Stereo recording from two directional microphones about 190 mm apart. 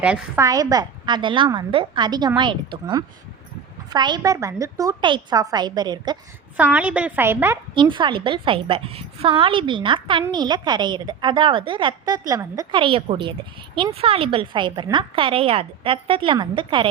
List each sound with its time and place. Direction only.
0.0 s a woman's voice: 5° right (ahead or behind)
0.4 s a woman's voice: 20° right (ahead or behind)
3.8 s a woman's voice: 20° right (ahead or behind)
6.6 s a woman's voice: 10° right (ahead or behind)
7.8 s a woman's voice: 25° right (ahead or behind)